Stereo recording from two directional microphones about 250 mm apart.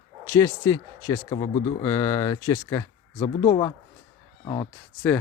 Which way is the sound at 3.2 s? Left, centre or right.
Left.